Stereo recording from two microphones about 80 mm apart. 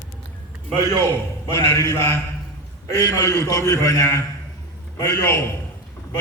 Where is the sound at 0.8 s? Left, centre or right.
Left.